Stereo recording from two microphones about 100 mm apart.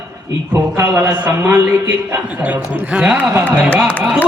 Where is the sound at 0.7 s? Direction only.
30° right (ahead or behind).